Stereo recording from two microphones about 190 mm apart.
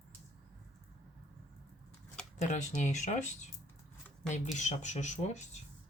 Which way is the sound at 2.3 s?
40° left (ahead or behind).